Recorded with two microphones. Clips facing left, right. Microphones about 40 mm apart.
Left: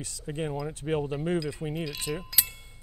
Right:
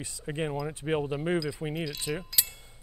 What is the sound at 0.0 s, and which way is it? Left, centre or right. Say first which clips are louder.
Speech: right 1 dB; right.